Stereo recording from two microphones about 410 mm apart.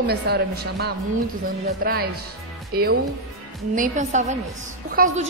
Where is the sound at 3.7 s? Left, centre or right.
Centre.